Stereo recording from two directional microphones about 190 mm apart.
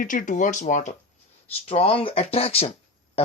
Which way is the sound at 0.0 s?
45° left (ahead or behind).